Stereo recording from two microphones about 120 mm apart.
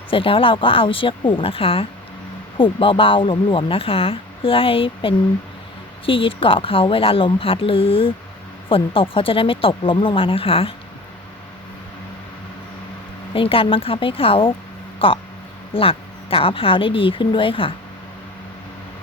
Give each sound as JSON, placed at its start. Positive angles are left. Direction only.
{"t": 0.1, "sound": "speech", "side_deg": 50}
{"t": 13.3, "sound": "speech", "side_deg": 50}